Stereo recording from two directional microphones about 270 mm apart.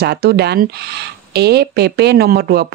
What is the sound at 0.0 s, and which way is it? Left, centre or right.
Speech, right.